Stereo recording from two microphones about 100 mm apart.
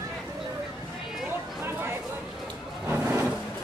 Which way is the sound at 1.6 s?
25° right (ahead or behind).